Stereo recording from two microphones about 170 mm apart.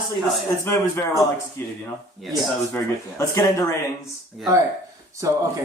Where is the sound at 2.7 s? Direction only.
15° left (ahead or behind).